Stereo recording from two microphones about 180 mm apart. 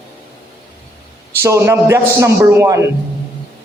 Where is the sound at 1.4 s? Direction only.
15° right (ahead or behind).